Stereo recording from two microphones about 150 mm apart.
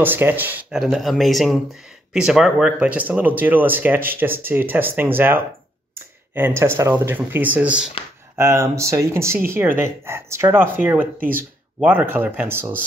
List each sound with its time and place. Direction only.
0.0 s speech: 15° right (ahead or behind)
8.4 s speech: 20° right (ahead or behind)